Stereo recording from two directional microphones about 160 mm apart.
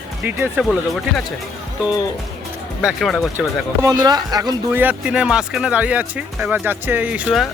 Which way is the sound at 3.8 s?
25° right (ahead or behind).